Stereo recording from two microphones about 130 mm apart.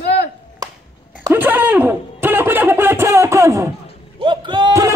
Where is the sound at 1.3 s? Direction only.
15° right (ahead or behind).